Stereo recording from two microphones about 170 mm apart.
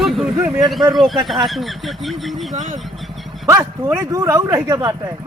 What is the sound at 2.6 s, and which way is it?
Speech, 45° right (ahead or behind).